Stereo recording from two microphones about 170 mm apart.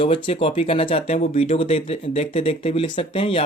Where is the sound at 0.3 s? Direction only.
35° left (ahead or behind).